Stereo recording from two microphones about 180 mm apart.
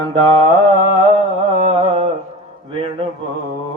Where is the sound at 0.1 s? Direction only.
30° right (ahead or behind).